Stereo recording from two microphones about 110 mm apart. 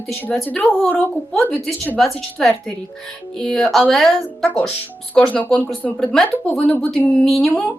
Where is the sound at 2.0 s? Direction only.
Centre (ahead or behind).